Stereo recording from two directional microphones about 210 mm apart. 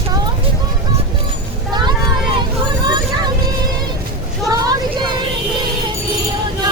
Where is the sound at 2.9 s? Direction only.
20° right (ahead or behind).